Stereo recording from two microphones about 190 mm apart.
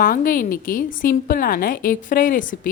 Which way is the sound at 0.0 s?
50° left (ahead or behind).